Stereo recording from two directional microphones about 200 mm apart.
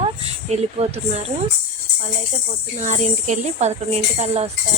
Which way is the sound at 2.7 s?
35° right (ahead or behind).